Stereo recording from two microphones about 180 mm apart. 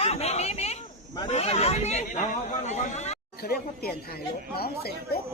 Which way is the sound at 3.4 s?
60° left (ahead or behind).